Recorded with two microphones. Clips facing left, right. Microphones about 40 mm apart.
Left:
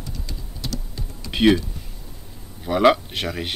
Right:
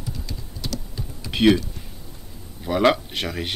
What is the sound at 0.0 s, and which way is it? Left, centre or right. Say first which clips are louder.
Typing: right 1 dB; centre.